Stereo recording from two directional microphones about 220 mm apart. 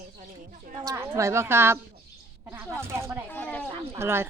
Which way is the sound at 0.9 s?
10° right (ahead or behind).